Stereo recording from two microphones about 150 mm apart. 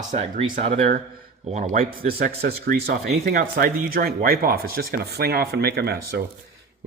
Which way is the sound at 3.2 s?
70° right (ahead or behind).